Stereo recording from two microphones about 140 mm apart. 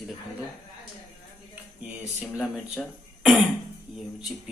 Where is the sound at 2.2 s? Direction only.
Centre (ahead or behind).